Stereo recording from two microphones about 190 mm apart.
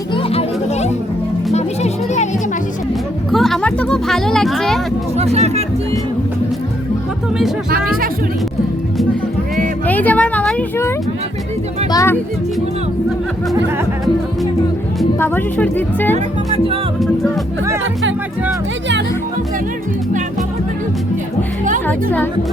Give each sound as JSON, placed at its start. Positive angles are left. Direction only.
{"t": 0.1, "sound": "music", "side_deg": 30}
{"t": 3.3, "sound": "speech", "side_deg": 0}
{"t": 5.1, "sound": "speech", "side_deg": -35}
{"t": 9.8, "sound": "speech", "side_deg": 10}
{"t": 15.2, "sound": "speech", "side_deg": 10}
{"t": 21.8, "sound": "speech", "side_deg": 10}